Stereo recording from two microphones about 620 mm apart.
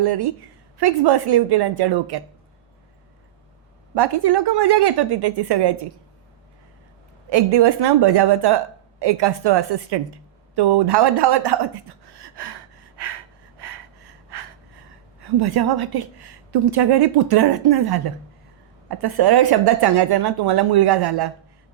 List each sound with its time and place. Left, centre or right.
0.0 s a woman's voice: right
3.9 s a woman's voice: right
7.3 s a woman's voice: right
13.0 s gasp: right
15.2 s a woman's voice: right